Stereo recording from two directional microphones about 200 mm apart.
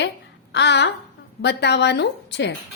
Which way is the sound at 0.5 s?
60° left (ahead or behind).